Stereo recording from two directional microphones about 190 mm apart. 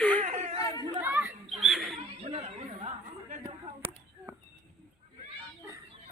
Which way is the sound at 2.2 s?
35° right (ahead or behind).